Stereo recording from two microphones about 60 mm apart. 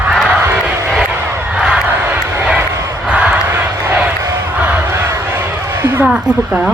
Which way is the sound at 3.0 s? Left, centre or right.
Right.